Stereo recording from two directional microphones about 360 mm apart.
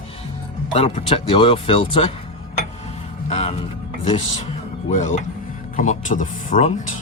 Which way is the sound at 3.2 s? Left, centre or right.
Centre.